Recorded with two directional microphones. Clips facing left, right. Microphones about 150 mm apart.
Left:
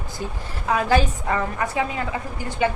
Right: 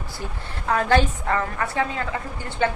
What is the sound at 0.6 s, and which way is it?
A woman's voice, 10° left (ahead or behind).